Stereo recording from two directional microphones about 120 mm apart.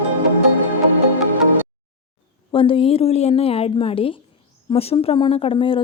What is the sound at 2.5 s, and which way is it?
A woman's voice, 50° left (ahead or behind).